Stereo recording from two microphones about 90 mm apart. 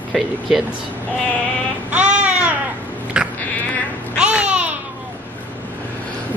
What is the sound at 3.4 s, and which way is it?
Cat, 15° left (ahead or behind).